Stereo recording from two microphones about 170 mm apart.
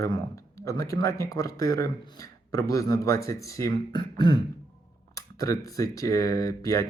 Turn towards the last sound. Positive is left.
turn(degrees=20)  # may be behind; listen again after turning